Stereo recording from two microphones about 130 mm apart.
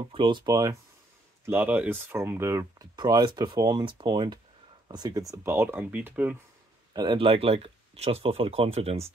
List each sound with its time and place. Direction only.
0.1 s speech: 40° right (ahead or behind)
1.4 s speech: 15° right (ahead or behind)
3.0 s speech: 35° right (ahead or behind); by 6.3 s 10° right (ahead or behind)
6.9 s speech: 35° right (ahead or behind); by 9.1 s 50° right (ahead or behind)